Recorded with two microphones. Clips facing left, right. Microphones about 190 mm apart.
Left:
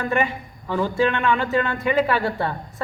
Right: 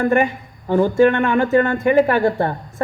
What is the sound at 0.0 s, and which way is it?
A man's voice, 45° right (ahead or behind).